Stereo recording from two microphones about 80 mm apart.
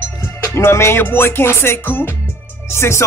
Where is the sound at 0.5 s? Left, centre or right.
Left.